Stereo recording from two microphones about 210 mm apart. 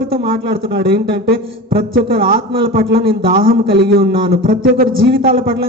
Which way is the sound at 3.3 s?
45° right (ahead or behind).